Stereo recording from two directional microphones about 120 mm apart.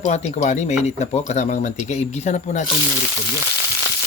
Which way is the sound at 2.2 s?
90° left.